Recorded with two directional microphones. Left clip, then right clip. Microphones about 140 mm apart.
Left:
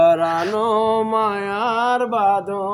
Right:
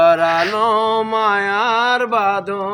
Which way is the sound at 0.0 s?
5° left (ahead or behind).